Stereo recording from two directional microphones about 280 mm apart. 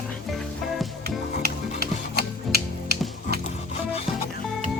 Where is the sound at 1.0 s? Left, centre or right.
Right.